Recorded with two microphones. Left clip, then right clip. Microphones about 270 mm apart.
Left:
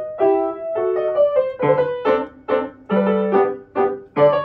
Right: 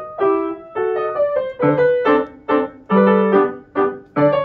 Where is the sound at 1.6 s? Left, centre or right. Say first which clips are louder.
Right 7 dB; left.